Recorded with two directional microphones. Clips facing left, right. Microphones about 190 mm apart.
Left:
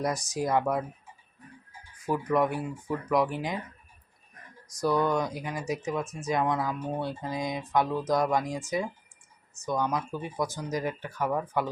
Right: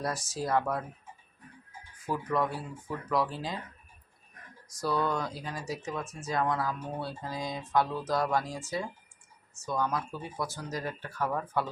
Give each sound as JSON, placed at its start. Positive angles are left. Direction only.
{"t": 0.0, "sound": "speech", "side_deg": 15}
{"t": 2.0, "sound": "speech", "side_deg": 15}
{"t": 4.8, "sound": "speech", "side_deg": 15}